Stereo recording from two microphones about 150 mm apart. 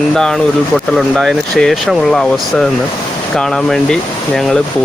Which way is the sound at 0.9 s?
Centre (ahead or behind).